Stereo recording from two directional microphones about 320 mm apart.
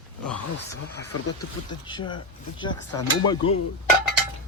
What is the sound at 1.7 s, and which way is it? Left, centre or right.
Speech, centre.